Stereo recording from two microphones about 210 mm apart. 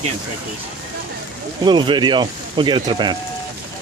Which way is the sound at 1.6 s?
20° right (ahead or behind).